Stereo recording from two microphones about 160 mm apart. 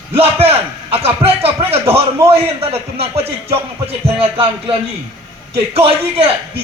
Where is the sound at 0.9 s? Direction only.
40° right (ahead or behind).